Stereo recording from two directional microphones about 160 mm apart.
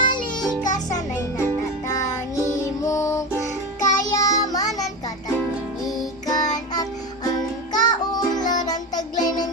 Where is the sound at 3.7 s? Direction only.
50° left (ahead or behind).